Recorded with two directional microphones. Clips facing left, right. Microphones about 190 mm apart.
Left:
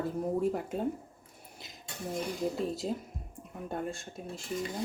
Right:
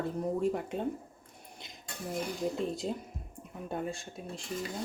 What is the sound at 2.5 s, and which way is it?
Speech, centre (ahead or behind).